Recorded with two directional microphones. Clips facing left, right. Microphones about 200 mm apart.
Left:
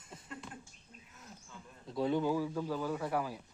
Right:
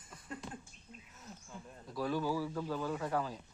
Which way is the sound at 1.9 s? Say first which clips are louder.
Left 3 dB; 20° left (ahead or behind).